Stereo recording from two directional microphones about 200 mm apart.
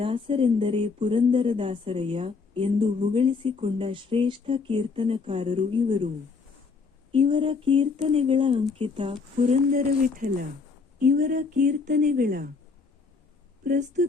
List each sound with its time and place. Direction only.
0.0 s speech: 25° right (ahead or behind)
7.1 s speech: 25° right (ahead or behind); by 12.5 s 45° right (ahead or behind)
13.7 s speech: 40° right (ahead or behind)